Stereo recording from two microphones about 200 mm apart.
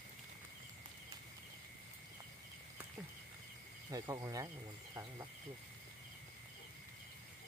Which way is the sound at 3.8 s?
20° right (ahead or behind).